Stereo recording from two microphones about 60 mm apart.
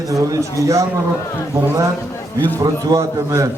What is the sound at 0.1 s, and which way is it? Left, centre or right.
Speech, right.